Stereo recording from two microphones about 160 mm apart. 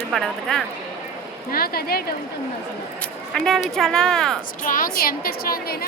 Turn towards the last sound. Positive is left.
turn(degrees=70)  # may be behind; listen again after turning